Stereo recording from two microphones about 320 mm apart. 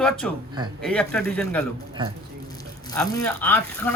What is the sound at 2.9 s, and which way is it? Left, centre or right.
Speech, centre.